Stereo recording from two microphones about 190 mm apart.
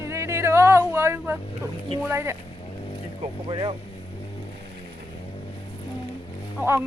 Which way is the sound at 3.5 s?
25° right (ahead or behind).